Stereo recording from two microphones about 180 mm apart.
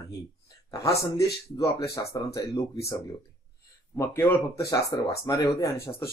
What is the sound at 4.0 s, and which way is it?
Speech, 15° left (ahead or behind).